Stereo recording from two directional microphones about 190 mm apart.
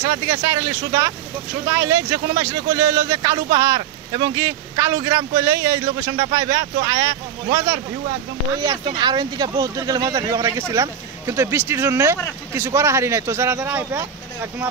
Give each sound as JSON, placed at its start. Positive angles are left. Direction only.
{"t": 0.3, "sound": "speech", "side_deg": -15}
{"t": 8.6, "sound": "speech", "side_deg": -25}